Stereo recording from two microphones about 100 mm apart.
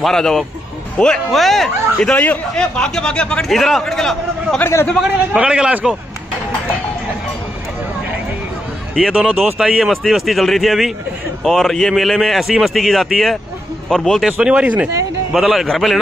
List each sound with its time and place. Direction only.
0.0 s a man's voice: 5° left (ahead or behind)
5.0 s a man's voice: 10° right (ahead or behind)
9.1 s a man's voice: 5° right (ahead or behind)
14.2 s a man's voice: 10° right (ahead or behind)